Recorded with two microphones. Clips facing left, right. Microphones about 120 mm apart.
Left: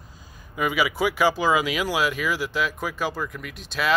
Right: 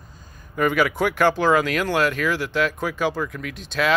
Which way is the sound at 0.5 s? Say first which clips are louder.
Right 4 dB; 5° left (ahead or behind).